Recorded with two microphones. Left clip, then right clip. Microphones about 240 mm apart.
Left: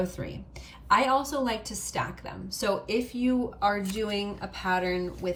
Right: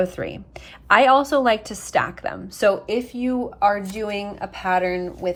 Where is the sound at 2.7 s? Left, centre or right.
Centre.